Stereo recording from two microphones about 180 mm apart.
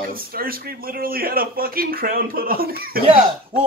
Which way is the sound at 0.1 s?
55° right (ahead or behind).